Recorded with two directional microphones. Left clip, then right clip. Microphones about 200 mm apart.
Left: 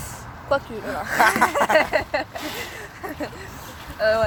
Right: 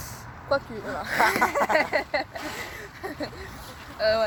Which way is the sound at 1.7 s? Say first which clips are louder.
Left 4 dB; 25° right (ahead or behind).